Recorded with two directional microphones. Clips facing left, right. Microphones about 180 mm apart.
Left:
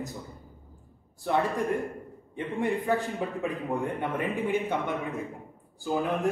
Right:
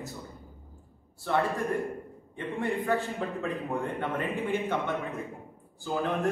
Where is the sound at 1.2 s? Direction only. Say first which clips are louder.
Left 1 dB; 15° left (ahead or behind).